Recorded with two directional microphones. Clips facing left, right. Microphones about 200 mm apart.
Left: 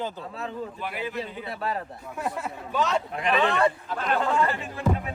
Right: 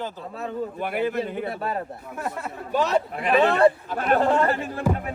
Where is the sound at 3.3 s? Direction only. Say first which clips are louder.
Right 5 dB; 35° right (ahead or behind).